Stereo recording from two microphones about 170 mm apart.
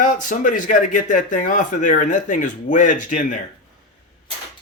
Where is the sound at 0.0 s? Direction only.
50° left (ahead or behind).